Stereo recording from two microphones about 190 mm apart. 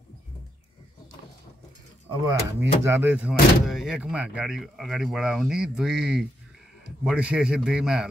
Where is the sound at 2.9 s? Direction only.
10° right (ahead or behind).